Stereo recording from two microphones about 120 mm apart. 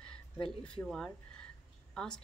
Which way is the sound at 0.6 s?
5° left (ahead or behind).